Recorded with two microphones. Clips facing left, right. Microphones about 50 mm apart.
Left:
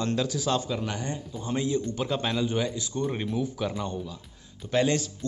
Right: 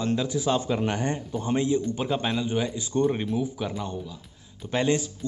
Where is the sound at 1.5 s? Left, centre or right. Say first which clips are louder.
Right 3 dB; right.